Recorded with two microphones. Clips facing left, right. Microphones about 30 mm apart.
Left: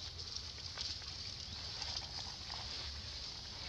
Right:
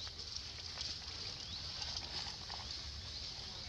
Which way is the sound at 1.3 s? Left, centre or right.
Centre.